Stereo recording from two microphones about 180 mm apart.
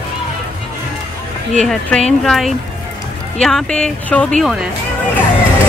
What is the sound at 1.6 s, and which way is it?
Speech, 5° left (ahead or behind).